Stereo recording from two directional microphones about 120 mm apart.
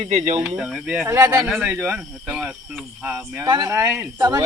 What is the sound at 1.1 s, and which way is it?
Speech, 20° right (ahead or behind).